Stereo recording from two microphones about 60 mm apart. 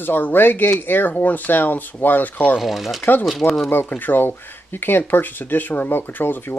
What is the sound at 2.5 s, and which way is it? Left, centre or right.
Speech, centre.